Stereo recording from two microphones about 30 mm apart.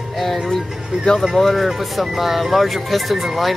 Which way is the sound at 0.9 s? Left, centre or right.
Right.